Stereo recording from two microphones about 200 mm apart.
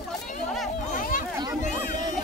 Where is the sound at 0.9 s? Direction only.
45° left (ahead or behind).